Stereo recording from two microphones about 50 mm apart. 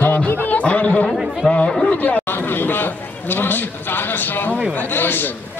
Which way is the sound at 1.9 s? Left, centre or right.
Left.